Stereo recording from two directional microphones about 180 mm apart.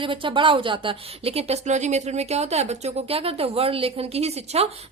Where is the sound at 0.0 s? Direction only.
30° right (ahead or behind).